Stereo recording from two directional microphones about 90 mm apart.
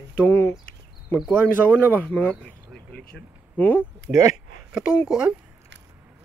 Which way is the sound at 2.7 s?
10° left (ahead or behind).